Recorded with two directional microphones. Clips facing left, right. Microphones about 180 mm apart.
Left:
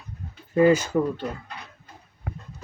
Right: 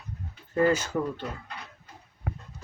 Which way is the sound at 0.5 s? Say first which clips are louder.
Left 6 dB; 15° left (ahead or behind).